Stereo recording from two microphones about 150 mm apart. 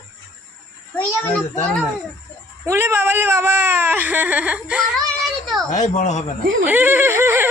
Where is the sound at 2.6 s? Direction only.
15° right (ahead or behind).